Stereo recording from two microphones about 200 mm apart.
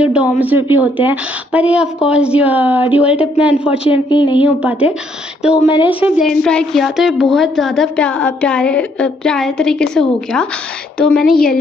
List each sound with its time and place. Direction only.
0.0 s a woman's voice: 5° right (ahead or behind)
3.9 s a woman's voice: 25° left (ahead or behind)
4.4 s a woman's voice: 5° right (ahead or behind)
5.7 s a woman's voice: 25° left (ahead or behind)
5.9 s a woman's voice: 5° right (ahead or behind)